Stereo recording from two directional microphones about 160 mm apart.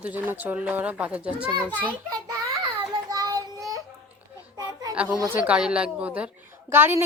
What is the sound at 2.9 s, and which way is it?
Child singing, 25° right (ahead or behind).